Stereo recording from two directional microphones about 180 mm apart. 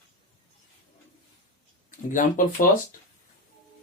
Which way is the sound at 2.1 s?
45° left (ahead or behind).